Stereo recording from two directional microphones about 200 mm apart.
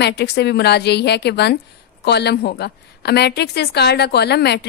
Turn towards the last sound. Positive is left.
turn(degrees=55)  # may be behind; listen again after turning